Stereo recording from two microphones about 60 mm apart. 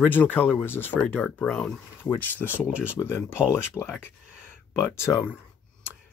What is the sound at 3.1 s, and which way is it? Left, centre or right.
Speech, left.